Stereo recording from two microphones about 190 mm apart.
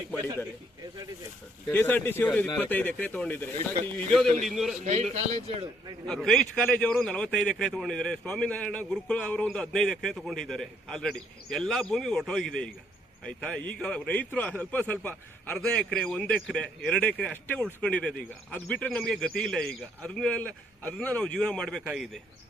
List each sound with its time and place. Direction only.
1.7 s a man's voice: 10° left (ahead or behind)
4.8 s a man's voice: 35° right (ahead or behind)
6.1 s a man's voice: centre (ahead or behind)